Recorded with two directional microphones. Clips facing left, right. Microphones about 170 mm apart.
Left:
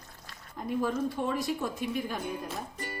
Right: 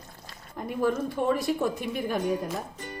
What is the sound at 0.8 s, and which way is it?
Speech, 60° right (ahead or behind).